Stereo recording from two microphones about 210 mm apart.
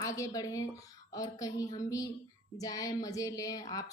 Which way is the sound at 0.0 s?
15° left (ahead or behind).